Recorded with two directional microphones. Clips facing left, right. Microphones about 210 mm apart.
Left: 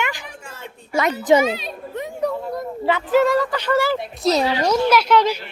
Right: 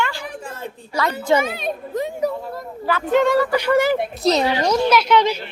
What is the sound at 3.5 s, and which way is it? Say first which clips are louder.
Speech: right 3 dB; 15° right (ahead or behind).